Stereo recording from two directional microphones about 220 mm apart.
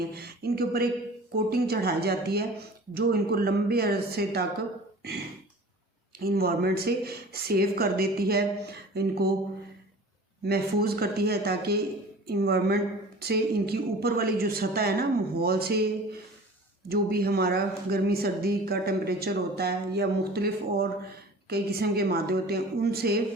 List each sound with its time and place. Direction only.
0.1 s a woman's voice: 45° right (ahead or behind)
6.1 s a woman's voice: 45° right (ahead or behind)
10.4 s a woman's voice: 45° right (ahead or behind)
16.9 s a woman's voice: 45° right (ahead or behind)